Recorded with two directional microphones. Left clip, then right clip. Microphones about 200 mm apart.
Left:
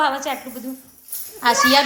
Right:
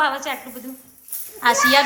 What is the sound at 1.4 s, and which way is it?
Speech, 10° left (ahead or behind).